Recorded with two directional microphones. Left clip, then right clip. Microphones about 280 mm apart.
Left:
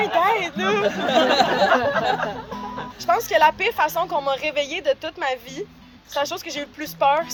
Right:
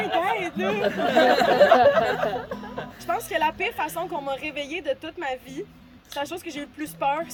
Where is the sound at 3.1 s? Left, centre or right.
Centre.